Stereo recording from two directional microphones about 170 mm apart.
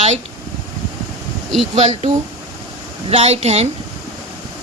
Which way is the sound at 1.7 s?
40° right (ahead or behind).